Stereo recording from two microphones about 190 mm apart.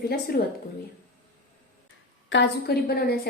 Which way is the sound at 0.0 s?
55° left (ahead or behind).